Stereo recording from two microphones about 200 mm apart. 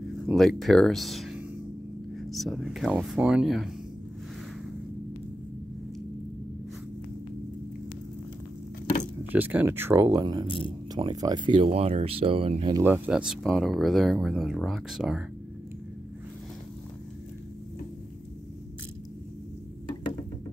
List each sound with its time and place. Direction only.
0.3 s speech: centre (ahead or behind)
9.3 s speech: 10° right (ahead or behind); by 12.7 s 30° right (ahead or behind)
12.7 s speech: 10° right (ahead or behind)